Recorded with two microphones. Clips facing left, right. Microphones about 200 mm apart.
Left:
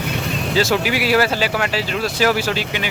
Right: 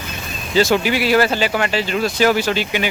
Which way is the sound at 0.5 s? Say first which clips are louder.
Right 3 dB; 5° left (ahead or behind).